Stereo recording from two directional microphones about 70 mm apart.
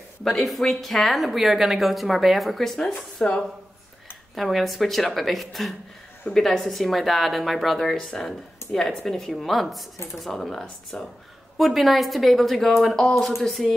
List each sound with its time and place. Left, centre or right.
0.2 s speech: centre
3.2 s speech: centre
4.4 s speech: centre
8.6 s a sound: left
9.0 s speech: centre